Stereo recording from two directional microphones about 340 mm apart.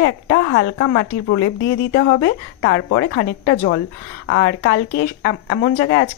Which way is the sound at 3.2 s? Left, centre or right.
Left.